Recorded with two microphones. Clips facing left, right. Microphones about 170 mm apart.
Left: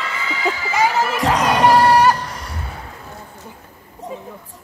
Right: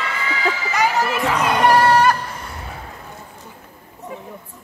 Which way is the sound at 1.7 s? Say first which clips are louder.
Left 1 dB; 15° left (ahead or behind).